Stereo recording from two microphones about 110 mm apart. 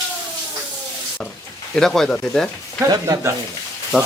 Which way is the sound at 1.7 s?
5° left (ahead or behind).